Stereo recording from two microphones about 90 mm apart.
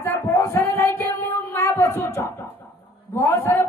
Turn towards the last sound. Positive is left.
turn(degrees=30)  # may be behind; listen again after turning